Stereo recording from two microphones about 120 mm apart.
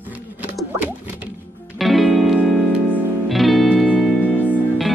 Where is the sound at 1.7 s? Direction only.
Centre (ahead or behind).